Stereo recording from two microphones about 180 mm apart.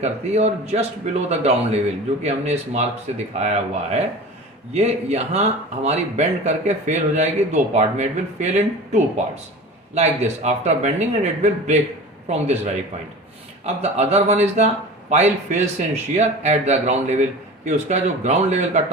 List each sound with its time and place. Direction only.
0.0 s speech: 35° right (ahead or behind)
13.7 s speech: 35° right (ahead or behind)